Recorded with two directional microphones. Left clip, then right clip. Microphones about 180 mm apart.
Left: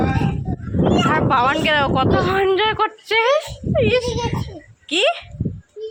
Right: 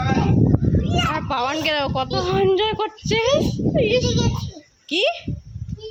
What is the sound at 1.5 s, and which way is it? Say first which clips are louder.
A child's voice: left 4 dB; 15° right (ahead or behind).